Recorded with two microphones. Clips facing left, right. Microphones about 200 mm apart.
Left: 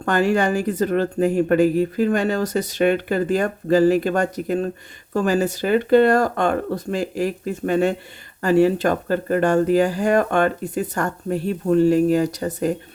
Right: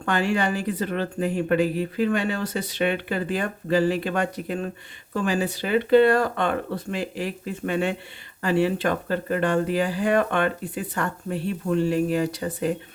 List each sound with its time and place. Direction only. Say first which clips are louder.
0.0 s speech: left 5 dB; 40° left (ahead or behind)